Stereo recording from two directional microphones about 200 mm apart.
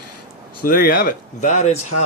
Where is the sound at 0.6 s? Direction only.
45° left (ahead or behind).